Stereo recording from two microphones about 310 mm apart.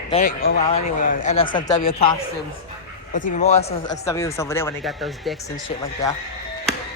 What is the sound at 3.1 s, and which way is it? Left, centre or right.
Speech, left.